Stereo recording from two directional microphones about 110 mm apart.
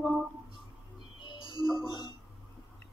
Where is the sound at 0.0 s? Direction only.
5° right (ahead or behind).